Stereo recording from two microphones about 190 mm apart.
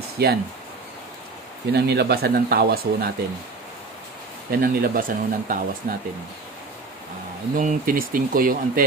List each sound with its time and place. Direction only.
0.2 s speech: 60° right (ahead or behind)
1.7 s speech: 60° right (ahead or behind)
4.5 s speech: 50° right (ahead or behind)
7.5 s speech: 45° right (ahead or behind)